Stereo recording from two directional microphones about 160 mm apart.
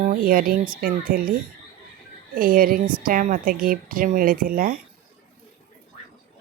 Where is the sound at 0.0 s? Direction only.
60° right (ahead or behind).